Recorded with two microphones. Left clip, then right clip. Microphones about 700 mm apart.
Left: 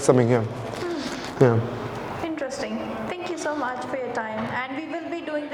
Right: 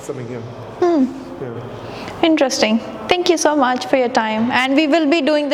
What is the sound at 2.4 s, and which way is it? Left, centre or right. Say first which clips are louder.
A woman's voice: right 13 dB; right.